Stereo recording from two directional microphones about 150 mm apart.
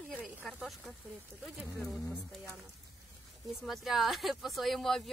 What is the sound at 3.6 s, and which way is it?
Speech, centre (ahead or behind).